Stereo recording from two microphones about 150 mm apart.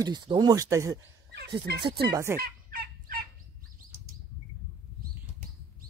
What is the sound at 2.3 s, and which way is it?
Fowl, 75° right (ahead or behind).